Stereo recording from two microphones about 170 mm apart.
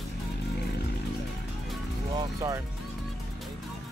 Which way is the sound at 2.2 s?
20° right (ahead or behind).